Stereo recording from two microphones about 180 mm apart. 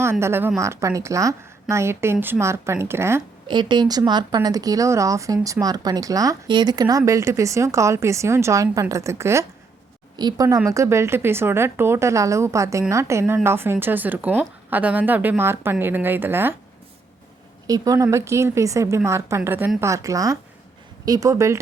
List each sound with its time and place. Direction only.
0.0 s speech: 15° right (ahead or behind)
3.5 s speech: 25° right (ahead or behind)
17.7 s speech: 20° right (ahead or behind)